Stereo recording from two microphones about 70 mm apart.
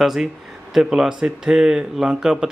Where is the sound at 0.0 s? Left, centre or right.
Centre.